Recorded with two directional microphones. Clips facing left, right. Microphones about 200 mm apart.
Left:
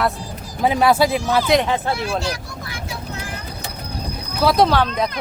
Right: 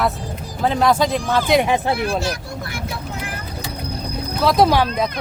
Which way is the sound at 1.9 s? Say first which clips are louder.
Right 2 dB; 55° right (ahead or behind).